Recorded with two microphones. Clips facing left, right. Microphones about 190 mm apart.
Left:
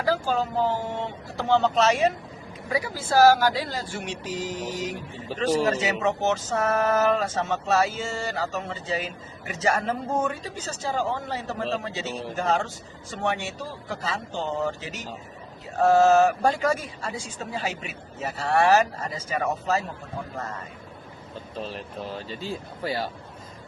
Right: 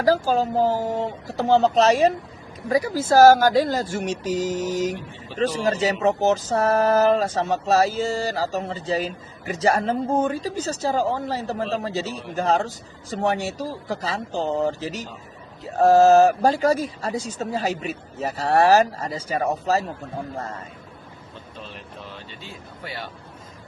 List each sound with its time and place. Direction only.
0.0 s speech: 40° right (ahead or behind)
5.3 s speech: 40° left (ahead or behind)
5.8 s speech: 35° right (ahead or behind)
21.6 s speech: 40° left (ahead or behind)